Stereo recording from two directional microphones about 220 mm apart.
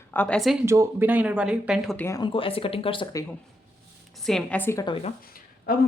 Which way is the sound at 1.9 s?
10° left (ahead or behind).